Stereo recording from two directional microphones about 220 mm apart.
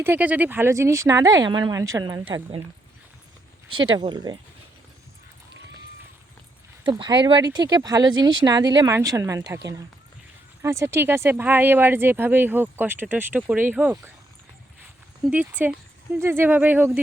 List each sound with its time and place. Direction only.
0.0 s speech: 10° right (ahead or behind)
3.7 s speech: 20° right (ahead or behind)
6.8 s speech: 20° right (ahead or behind)
10.6 s speech: 10° right (ahead or behind)
15.2 s speech: 5° right (ahead or behind)